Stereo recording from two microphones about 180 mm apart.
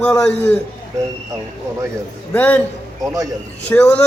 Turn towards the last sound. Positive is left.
turn(degrees=5)  # may be behind; listen again after turning